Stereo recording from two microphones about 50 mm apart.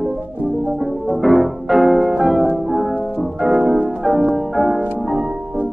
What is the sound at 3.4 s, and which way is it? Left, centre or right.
Music, centre.